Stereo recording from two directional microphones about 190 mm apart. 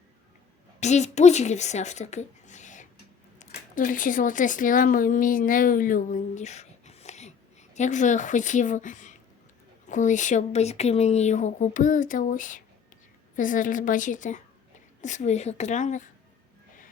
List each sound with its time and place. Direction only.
0.8 s a woman's voice: 35° left (ahead or behind)